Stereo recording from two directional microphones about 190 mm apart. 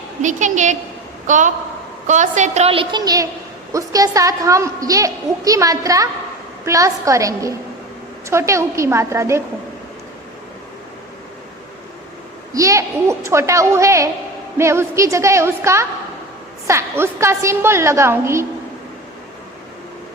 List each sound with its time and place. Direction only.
0.2 s a woman's voice: 40° right (ahead or behind); by 9.4 s 15° right (ahead or behind)
12.5 s a woman's voice: 15° right (ahead or behind)